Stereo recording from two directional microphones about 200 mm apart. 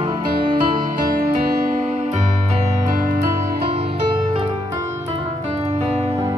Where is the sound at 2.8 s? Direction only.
40° right (ahead or behind).